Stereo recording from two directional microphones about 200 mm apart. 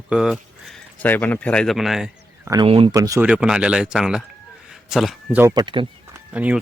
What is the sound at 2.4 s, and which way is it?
Speech, 20° right (ahead or behind).